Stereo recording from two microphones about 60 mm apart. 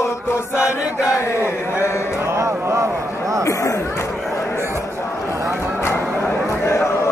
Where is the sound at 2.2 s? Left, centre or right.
Right.